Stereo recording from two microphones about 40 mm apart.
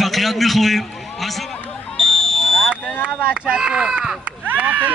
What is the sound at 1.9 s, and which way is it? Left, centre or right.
Smoke detector, centre.